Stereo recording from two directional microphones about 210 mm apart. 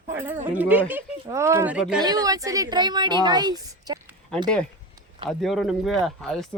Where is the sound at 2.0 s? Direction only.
20° right (ahead or behind).